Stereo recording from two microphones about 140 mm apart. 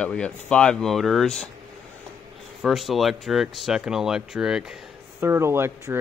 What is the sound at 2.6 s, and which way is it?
Speech, centre (ahead or behind).